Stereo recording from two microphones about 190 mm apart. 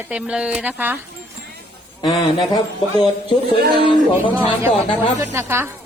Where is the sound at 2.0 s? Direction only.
25° left (ahead or behind).